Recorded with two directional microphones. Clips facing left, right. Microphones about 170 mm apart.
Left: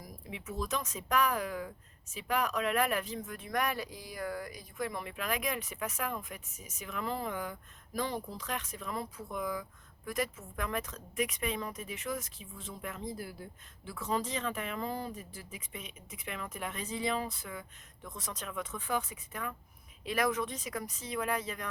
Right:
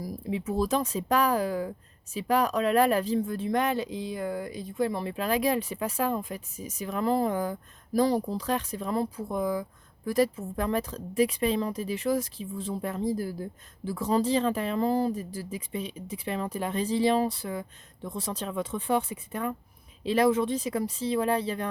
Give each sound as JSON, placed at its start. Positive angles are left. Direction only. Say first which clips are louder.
{"t": 0.0, "sound": "speech", "louder": "right 13 dB", "side_deg": -35}